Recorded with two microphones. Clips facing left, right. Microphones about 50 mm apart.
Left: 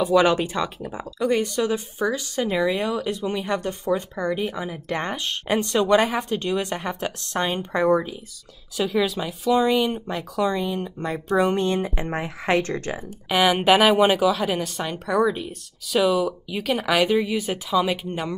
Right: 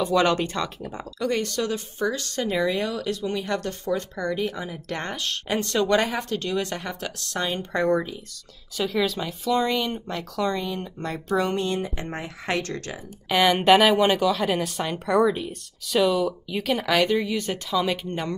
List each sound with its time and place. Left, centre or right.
0.0 s speech: centre
7.7 s speech: centre
11.5 s speech: left
11.9 s speech: centre
13.3 s speech: centre